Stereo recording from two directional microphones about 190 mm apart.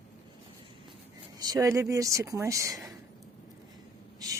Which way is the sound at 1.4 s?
20° right (ahead or behind).